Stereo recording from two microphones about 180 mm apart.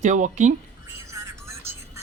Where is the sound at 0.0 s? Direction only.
45° right (ahead or behind).